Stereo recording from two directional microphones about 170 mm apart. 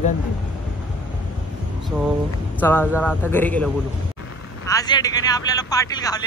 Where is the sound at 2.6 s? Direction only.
10° left (ahead or behind).